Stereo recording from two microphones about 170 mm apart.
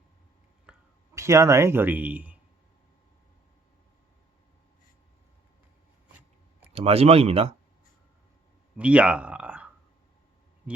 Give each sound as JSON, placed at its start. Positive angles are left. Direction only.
{"t": 0.7, "sound": "a sound", "side_deg": -5}
{"t": 1.1, "sound": "speech", "side_deg": -15}
{"t": 6.7, "sound": "speech", "side_deg": -35}
{"t": 8.8, "sound": "speech", "side_deg": -5}